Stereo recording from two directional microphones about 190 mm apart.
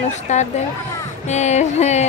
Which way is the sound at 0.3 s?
40° left (ahead or behind).